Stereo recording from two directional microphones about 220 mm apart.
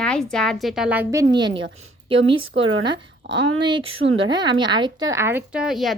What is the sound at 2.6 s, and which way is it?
A woman's voice, 60° right (ahead or behind).